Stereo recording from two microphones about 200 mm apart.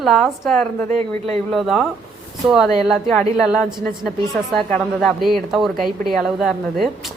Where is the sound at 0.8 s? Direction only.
30° right (ahead or behind).